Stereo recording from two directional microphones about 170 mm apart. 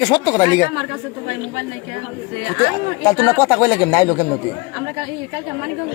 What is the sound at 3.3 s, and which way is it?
Speech, 20° left (ahead or behind).